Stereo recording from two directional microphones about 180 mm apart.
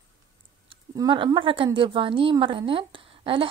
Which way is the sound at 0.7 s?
25° right (ahead or behind).